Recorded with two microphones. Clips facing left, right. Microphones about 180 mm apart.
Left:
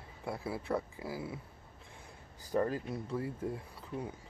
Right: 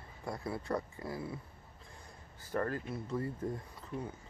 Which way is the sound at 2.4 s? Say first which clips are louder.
Left 3 dB; 15° left (ahead or behind).